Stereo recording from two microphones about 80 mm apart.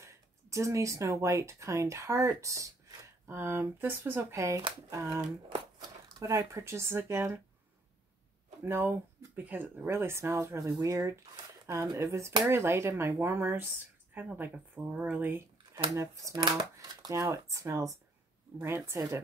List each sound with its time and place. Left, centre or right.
0.0 s speech: right
5.5 s crumpling: right
6.2 s speech: right
8.6 s speech: right
15.7 s speech: right
16.4 s speech: right
17.2 s speech: right